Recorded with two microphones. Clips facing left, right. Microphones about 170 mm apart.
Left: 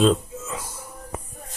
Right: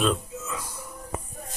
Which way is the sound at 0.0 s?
25° left (ahead or behind).